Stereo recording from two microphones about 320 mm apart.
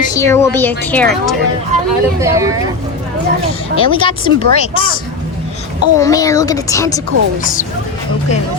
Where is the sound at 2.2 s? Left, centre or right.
Centre.